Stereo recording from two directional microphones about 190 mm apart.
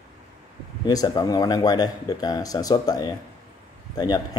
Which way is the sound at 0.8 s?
20° left (ahead or behind).